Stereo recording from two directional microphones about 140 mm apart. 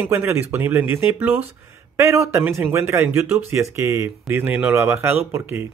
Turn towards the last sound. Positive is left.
turn(degrees=-15)  # may be behind; listen again after turning